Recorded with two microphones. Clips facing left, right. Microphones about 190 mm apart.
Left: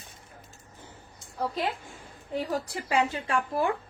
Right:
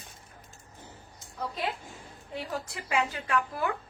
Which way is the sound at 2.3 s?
40° left (ahead or behind).